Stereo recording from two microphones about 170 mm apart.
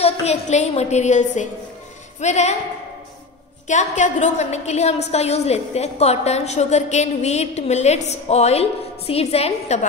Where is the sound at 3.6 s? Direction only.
45° left (ahead or behind).